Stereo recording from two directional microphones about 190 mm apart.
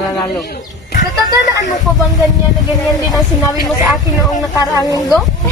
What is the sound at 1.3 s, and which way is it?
Speech, 20° right (ahead or behind).